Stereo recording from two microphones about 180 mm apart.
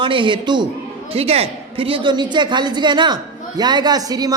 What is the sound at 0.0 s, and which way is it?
A man's voice, 25° right (ahead or behind).